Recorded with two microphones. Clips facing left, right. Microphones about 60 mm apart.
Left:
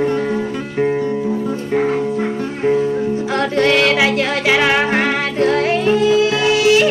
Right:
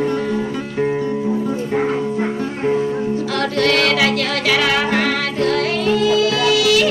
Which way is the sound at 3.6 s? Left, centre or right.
Left.